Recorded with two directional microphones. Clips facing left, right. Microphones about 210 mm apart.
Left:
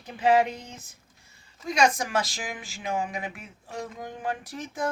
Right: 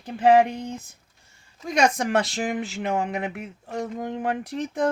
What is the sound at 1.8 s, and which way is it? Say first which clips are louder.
Speech: right 3 dB; 65° right (ahead or behind).